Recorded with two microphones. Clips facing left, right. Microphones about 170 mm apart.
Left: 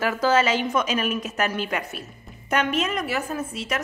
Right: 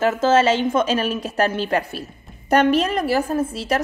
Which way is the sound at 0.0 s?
25° right (ahead or behind).